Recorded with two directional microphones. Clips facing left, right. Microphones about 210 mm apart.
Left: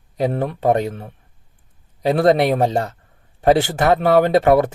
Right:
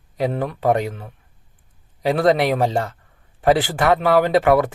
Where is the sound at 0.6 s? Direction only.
25° left (ahead or behind).